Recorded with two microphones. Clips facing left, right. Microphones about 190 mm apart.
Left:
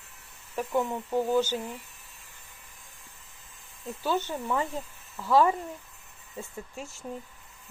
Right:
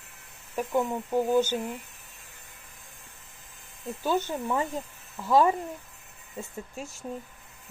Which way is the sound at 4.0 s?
15° right (ahead or behind).